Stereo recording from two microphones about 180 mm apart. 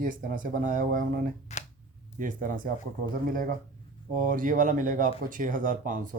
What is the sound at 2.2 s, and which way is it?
Speech, 50° right (ahead or behind).